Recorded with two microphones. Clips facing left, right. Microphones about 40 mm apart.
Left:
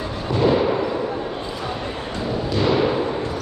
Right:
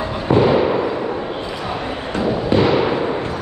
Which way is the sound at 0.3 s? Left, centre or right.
Right.